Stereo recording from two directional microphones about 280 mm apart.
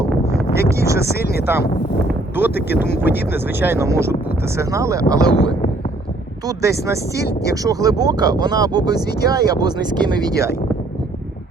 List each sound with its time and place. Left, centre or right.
0.8 s speech: centre
1.0 s speech: left
2.0 s a sound: centre
3.1 s speech: left
3.6 s speech: centre
6.6 s speech: centre